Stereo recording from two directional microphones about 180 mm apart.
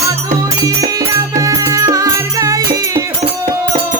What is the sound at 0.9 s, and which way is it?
Music, 20° right (ahead or behind).